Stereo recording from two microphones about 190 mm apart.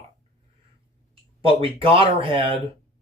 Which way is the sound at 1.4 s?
30° right (ahead or behind).